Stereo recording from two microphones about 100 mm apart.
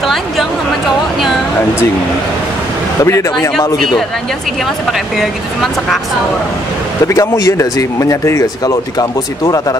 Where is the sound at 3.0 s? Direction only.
30° left (ahead or behind).